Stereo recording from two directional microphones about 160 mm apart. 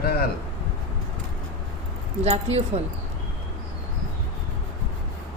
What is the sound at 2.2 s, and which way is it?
Speech, 40° right (ahead or behind).